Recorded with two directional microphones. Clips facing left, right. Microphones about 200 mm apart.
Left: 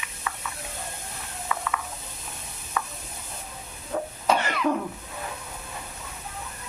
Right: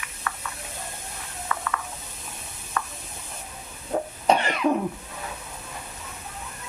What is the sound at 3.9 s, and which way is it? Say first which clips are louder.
Cough: right 2 dB; 35° right (ahead or behind).